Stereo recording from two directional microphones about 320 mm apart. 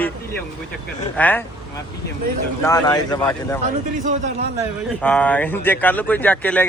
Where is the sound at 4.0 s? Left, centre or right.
Right.